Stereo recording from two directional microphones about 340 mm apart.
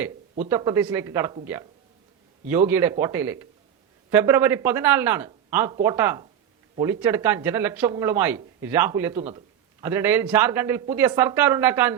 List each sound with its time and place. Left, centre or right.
0.4 s speech: centre
2.5 s speech: centre